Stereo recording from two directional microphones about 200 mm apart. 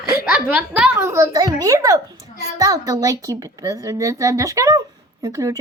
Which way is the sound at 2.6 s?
15° right (ahead or behind).